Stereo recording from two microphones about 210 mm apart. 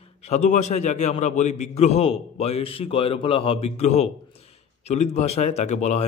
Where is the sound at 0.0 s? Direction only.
30° left (ahead or behind).